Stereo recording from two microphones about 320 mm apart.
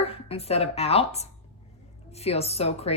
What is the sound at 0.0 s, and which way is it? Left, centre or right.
A woman's voice, centre.